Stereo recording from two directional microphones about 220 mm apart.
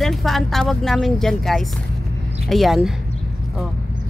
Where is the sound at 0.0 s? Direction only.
Centre (ahead or behind).